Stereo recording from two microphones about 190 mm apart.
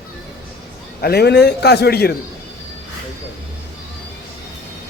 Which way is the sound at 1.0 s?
60° left (ahead or behind).